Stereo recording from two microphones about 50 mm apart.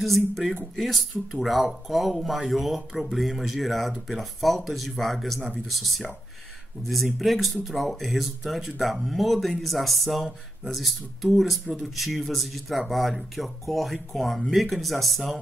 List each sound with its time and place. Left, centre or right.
0.0 s speech: centre